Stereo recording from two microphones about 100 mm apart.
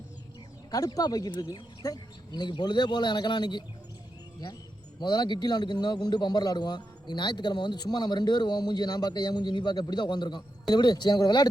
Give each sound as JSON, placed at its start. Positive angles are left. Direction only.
{"t": 0.7, "sound": "a man's voice", "side_deg": 35}
{"t": 4.9, "sound": "a man's voice", "side_deg": 45}